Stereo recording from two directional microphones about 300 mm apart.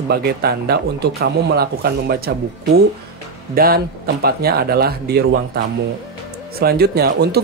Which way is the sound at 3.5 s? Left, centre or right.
Right.